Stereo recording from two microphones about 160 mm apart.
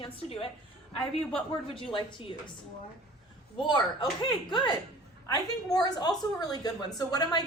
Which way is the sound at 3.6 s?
30° left (ahead or behind).